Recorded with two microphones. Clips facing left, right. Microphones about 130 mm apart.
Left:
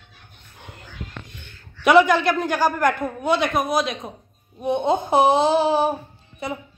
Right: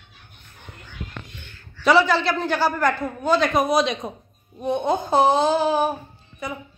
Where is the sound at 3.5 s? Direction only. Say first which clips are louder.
Right 2 dB; centre (ahead or behind).